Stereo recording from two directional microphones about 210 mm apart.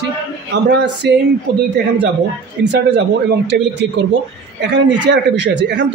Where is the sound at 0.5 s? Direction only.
55° right (ahead or behind).